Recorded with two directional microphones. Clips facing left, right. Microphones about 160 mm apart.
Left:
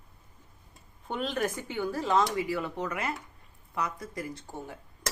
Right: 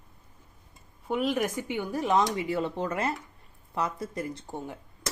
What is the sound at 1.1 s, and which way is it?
Speech, 10° right (ahead or behind).